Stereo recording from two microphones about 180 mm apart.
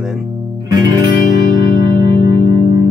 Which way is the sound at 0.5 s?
20° right (ahead or behind).